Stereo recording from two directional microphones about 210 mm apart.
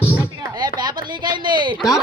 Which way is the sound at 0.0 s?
10° left (ahead or behind).